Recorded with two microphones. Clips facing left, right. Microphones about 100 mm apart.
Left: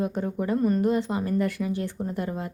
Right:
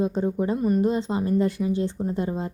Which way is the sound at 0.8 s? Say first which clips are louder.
Right 1 dB; 20° right (ahead or behind).